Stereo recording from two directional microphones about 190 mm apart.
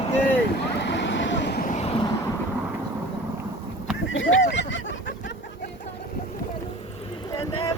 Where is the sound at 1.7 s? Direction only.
35° left (ahead or behind).